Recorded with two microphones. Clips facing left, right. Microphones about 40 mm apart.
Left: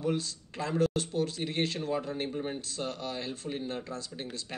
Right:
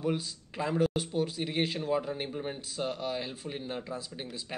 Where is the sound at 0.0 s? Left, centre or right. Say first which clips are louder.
Even; centre.